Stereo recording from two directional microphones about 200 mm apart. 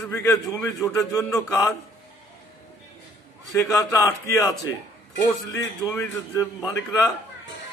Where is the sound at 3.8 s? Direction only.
15° left (ahead or behind).